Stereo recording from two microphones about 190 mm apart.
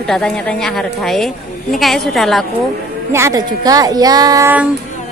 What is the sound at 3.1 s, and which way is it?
Speech, 20° right (ahead or behind).